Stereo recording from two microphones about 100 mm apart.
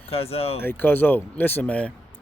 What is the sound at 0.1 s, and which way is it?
Speech, 80° left.